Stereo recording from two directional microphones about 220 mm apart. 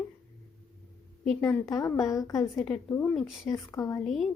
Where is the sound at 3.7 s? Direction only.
15° left (ahead or behind).